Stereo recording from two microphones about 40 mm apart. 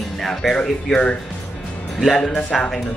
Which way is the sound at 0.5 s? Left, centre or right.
Left.